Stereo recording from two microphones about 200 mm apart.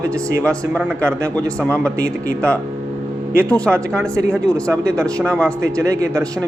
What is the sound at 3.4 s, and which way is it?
Speech, 5° left (ahead or behind).